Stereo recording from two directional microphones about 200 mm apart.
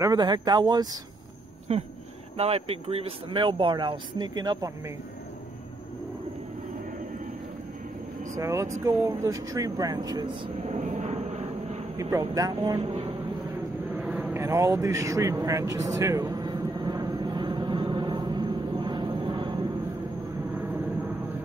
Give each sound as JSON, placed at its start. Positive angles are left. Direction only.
{"t": 0.0, "sound": "speech", "side_deg": -20}
{"t": 1.7, "sound": "a sound", "side_deg": -30}
{"t": 2.3, "sound": "speech", "side_deg": -30}
{"t": 8.4, "sound": "speech", "side_deg": -15}
{"t": 10.6, "sound": "vehicle", "side_deg": -35}
{"t": 12.0, "sound": "speech", "side_deg": -15}
{"t": 12.8, "sound": "speech", "side_deg": -35}
{"t": 13.7, "sound": "vehicle", "side_deg": 0}
{"t": 14.3, "sound": "a sound", "side_deg": -15}
{"t": 20.5, "sound": "vehicle", "side_deg": -15}